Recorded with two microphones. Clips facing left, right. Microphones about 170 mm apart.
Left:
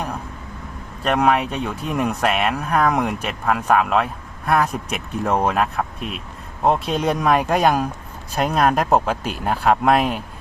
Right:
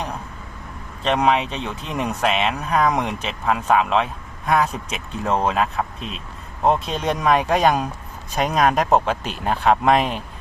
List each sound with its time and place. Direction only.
1.0 s speech: 5° left (ahead or behind)
2.7 s speech: 10° right (ahead or behind)
3.0 s speech: 5° left (ahead or behind)